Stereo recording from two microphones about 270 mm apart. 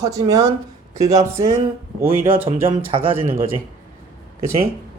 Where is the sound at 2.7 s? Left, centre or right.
Centre.